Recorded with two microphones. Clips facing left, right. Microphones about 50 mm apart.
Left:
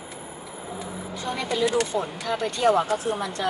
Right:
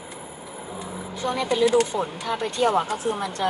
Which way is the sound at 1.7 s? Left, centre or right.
Centre.